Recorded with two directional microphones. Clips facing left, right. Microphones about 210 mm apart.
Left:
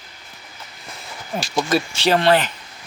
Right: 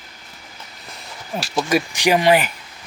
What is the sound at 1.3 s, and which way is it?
Speech, 5° right (ahead or behind).